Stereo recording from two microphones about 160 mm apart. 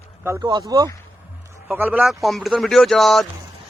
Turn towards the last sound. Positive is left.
turn(degrees=0)  # may be behind; listen again after turning